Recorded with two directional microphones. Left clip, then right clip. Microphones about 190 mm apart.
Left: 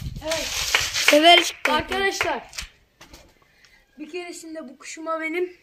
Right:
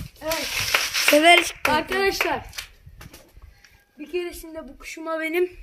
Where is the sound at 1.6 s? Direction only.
45° right (ahead or behind).